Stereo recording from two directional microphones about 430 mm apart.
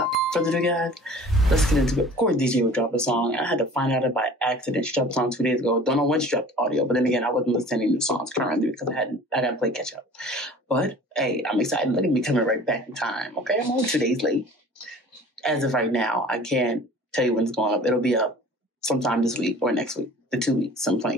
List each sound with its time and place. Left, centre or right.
0.0 s speech: centre
15.4 s speech: centre